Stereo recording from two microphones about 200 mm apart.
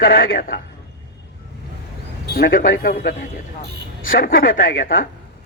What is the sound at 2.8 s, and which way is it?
Speech, 45° left (ahead or behind).